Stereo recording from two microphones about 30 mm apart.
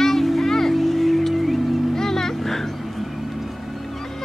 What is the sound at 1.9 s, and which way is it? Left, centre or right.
Music, centre.